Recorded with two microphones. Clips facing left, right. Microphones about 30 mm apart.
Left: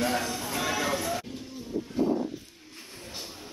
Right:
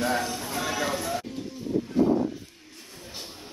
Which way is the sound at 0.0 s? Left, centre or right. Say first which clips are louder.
Right 1 dB; centre.